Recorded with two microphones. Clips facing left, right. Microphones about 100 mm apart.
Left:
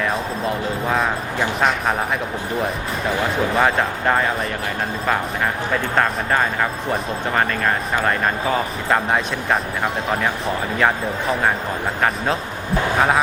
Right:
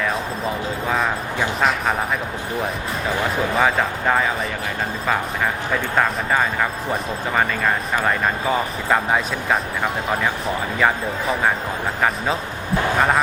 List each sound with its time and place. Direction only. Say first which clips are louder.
0.0 s speech: left 1 dB; centre (ahead or behind)
3.5 s speech: even; centre (ahead or behind)
6.0 s speech: even; centre (ahead or behind)
8.9 s speech: even; centre (ahead or behind)
13.0 s speech: left 1 dB; centre (ahead or behind)